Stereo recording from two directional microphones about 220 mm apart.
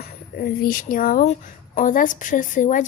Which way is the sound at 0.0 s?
40° left (ahead or behind).